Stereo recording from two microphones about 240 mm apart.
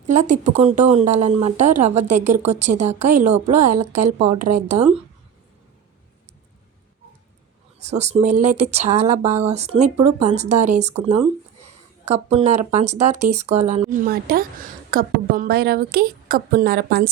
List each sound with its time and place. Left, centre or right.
0.0 s speech: right
7.8 s a woman's voice: right